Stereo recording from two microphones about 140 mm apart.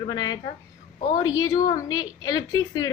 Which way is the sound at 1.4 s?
25° left (ahead or behind).